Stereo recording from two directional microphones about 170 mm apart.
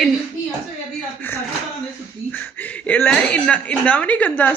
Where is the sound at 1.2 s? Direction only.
10° left (ahead or behind).